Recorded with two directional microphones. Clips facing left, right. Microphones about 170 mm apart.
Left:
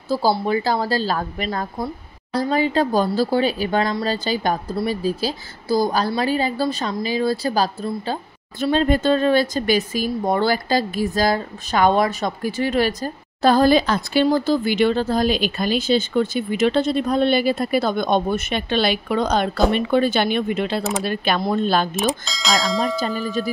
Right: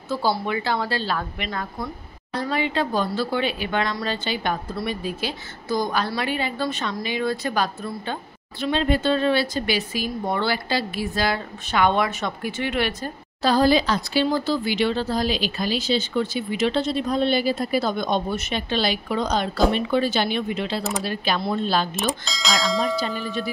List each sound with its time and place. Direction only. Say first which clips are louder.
0.1 s a woman's voice: left 5 dB; 35° left (ahead or behind)
22.2 s speech: left 3 dB; centre (ahead or behind)
22.9 s a woman's voice: left 3 dB; 40° left (ahead or behind)